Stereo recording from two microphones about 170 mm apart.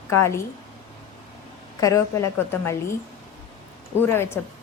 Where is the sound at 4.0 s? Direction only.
15° left (ahead or behind).